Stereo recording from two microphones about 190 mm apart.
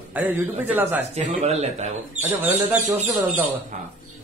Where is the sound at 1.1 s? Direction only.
35° right (ahead or behind).